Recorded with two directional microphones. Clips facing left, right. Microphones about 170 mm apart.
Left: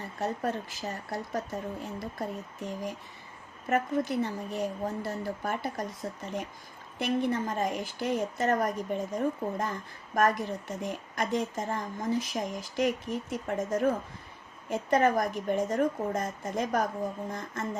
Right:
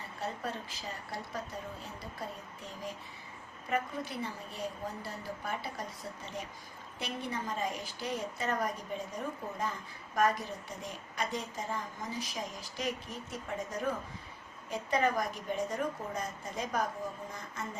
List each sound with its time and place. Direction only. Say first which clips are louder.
0.2 s a woman's voice: left 7 dB; 45° left (ahead or behind)
7.0 s a woman's voice: left 10 dB; 50° left (ahead or behind)